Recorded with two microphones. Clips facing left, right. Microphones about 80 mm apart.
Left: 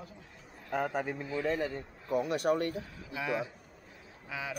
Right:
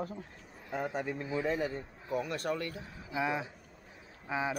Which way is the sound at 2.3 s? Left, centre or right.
Left.